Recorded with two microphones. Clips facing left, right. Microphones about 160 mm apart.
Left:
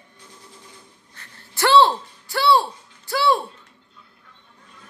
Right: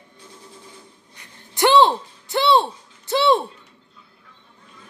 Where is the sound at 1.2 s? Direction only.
20° right (ahead or behind).